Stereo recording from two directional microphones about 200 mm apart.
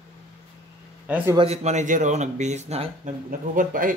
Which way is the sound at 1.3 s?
30° right (ahead or behind).